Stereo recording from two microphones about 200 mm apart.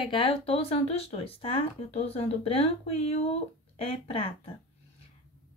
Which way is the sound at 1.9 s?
30° left (ahead or behind).